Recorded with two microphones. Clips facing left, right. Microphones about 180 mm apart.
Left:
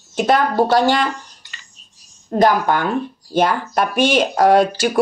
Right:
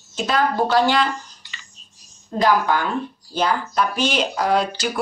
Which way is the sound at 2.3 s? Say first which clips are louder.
Left 3 dB; 55° left (ahead or behind).